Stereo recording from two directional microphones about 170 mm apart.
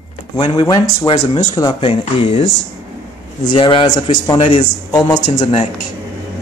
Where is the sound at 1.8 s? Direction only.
35° left (ahead or behind).